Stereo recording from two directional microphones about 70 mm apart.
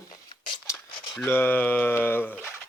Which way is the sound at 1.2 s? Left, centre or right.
Left.